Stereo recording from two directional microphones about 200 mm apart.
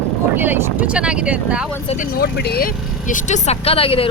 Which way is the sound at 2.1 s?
50° left (ahead or behind).